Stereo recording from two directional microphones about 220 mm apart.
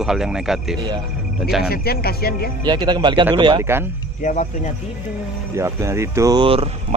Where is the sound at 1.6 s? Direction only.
45° left (ahead or behind).